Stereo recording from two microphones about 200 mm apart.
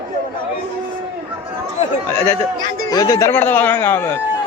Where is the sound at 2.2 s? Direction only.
15° left (ahead or behind).